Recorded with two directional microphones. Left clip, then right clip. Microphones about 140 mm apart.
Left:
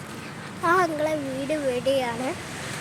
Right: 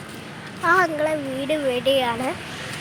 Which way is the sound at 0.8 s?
Centre (ahead or behind).